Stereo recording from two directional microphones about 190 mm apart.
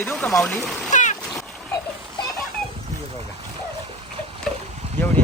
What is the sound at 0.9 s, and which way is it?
Splash, 40° left (ahead or behind).